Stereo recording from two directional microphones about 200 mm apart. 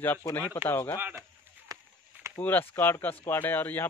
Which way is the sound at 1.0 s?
10° right (ahead or behind).